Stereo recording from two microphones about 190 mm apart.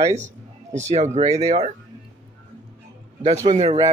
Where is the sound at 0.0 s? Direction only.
40° right (ahead or behind).